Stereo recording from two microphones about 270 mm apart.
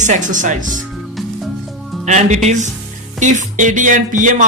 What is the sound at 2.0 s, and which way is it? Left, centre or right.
Speech, right.